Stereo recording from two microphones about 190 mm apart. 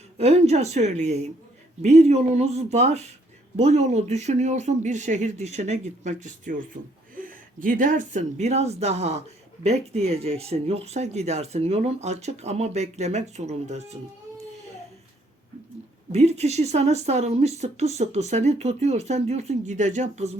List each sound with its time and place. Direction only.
0.2 s speech: 35° right (ahead or behind)
16.1 s speech: 35° right (ahead or behind)